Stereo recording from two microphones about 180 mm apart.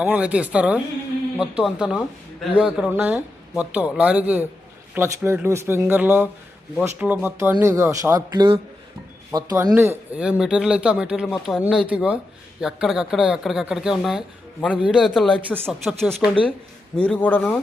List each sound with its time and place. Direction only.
0.0 s a man's voice: 5° right (ahead or behind); by 17.6 s 10° left (ahead or behind)